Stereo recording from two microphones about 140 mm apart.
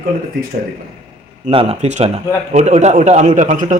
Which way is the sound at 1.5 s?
40° right (ahead or behind).